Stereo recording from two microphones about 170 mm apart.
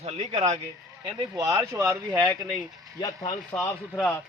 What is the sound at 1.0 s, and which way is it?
Speech, 15° right (ahead or behind).